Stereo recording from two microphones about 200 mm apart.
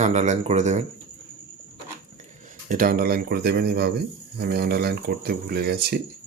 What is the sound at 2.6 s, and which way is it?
Speech, 45° right (ahead or behind).